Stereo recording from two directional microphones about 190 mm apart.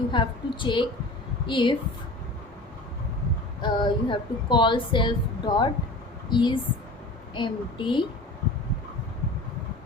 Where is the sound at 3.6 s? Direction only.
25° left (ahead or behind).